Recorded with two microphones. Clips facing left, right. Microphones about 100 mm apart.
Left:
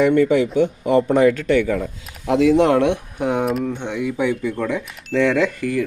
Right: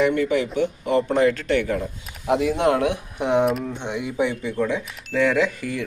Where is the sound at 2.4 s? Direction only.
90° left.